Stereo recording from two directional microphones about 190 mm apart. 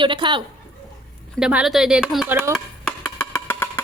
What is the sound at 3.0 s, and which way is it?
Wood block, 15° left (ahead or behind).